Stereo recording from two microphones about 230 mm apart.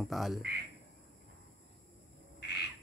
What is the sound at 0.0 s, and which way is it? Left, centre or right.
Speech, centre.